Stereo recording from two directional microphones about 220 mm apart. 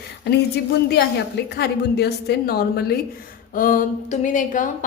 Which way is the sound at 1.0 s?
50° left (ahead or behind).